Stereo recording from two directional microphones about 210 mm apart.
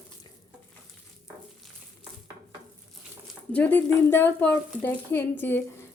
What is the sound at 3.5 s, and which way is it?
A woman's voice, 5° left (ahead or behind).